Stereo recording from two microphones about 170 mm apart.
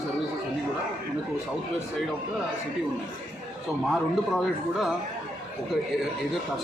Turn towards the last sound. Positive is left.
turn(degrees=0)  # may be behind; listen again after turning